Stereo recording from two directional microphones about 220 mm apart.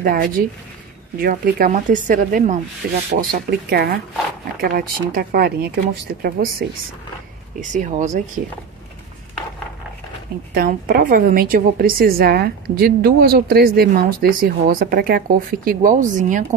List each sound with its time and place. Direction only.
0.0 s a woman's voice: 40° right (ahead or behind)
7.7 s a woman's voice: 35° right (ahead or behind)
10.5 s a woman's voice: 40° right (ahead or behind)